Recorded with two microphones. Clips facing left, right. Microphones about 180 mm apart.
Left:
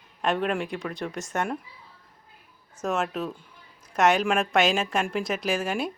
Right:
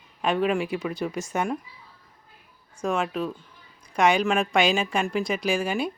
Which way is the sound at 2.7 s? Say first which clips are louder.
Right 1 dB; centre (ahead or behind).